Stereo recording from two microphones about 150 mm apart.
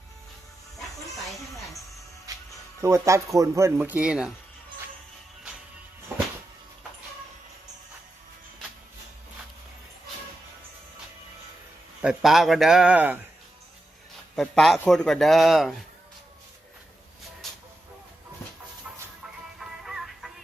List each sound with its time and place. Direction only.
0.8 s music: centre (ahead or behind)
2.8 s speech: 20° right (ahead or behind)
12.0 s a man's voice: centre (ahead or behind)
14.3 s a man's voice: 5° left (ahead or behind)
19.5 s music: centre (ahead or behind)